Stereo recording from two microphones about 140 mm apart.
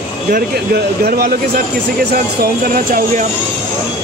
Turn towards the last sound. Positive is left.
turn(degrees=-90)